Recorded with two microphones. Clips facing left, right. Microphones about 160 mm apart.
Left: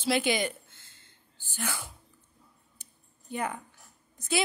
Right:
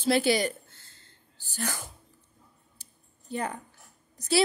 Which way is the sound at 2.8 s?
35° right (ahead or behind).